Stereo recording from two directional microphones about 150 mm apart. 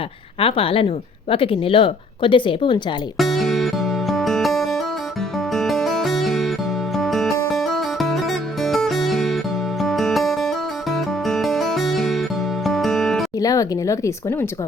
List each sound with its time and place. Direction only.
0.3 s speech: 40° left (ahead or behind)
3.2 s music: centre (ahead or behind)
13.4 s speech: 25° left (ahead or behind)